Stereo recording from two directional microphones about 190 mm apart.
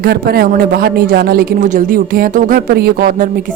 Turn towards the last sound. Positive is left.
turn(degrees=-45)  # may be behind; listen again after turning